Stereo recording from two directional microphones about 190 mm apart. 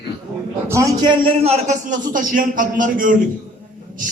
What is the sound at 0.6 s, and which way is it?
A man's voice, 15° right (ahead or behind).